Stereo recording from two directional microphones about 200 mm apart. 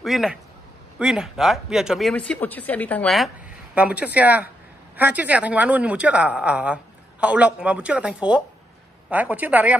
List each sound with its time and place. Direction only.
0.0 s speech: centre (ahead or behind)